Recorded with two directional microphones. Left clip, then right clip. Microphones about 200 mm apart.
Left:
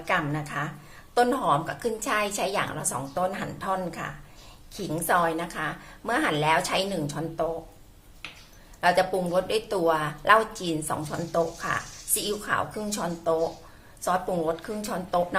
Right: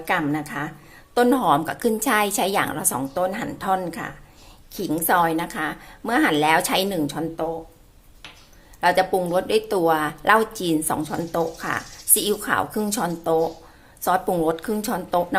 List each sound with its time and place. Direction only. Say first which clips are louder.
0.0 s a woman's voice: right 4 dB; 35° right (ahead or behind)
8.8 s a woman's voice: right 4 dB; 35° right (ahead or behind)